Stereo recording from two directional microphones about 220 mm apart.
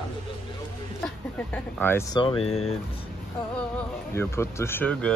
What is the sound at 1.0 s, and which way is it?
Speech, 10° left (ahead or behind).